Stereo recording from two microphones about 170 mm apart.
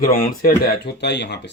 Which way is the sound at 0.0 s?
60° left (ahead or behind).